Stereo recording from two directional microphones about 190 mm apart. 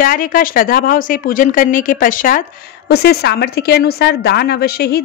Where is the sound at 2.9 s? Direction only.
60° left (ahead or behind).